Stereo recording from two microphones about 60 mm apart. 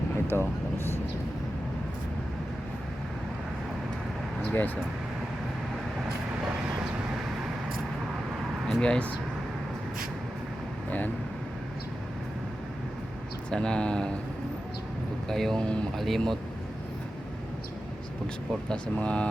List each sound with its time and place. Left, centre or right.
0.3 s speech: left
4.4 s speech: left
8.6 s speech: centre
10.8 s speech: left
13.5 s speech: centre
15.3 s speech: centre
16.0 s speech: centre
18.7 s speech: centre